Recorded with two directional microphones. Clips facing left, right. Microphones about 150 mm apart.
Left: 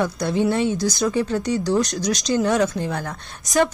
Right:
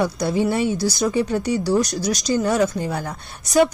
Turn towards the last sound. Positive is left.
turn(degrees=-10)  # may be behind; listen again after turning